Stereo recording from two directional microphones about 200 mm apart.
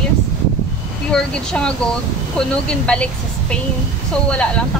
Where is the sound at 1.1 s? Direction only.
5° left (ahead or behind).